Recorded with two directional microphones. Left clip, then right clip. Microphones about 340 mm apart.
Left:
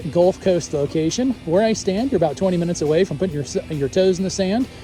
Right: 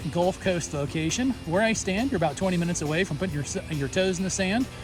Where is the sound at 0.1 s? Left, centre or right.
Centre.